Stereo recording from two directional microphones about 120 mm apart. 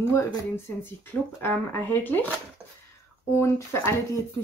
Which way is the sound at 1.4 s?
15° left (ahead or behind).